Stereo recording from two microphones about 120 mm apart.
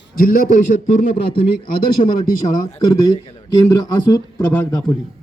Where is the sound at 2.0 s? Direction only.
65° left (ahead or behind).